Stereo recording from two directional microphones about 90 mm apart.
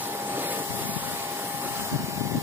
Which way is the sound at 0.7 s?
20° right (ahead or behind).